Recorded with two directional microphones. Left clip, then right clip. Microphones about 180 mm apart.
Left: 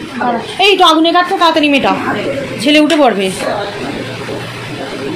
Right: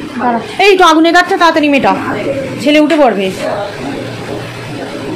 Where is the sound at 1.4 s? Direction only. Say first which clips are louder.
Right 1 dB; 10° right (ahead or behind).